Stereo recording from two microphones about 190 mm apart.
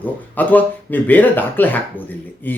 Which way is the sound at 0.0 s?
10° left (ahead or behind).